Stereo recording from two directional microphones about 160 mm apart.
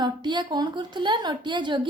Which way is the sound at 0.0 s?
30° right (ahead or behind).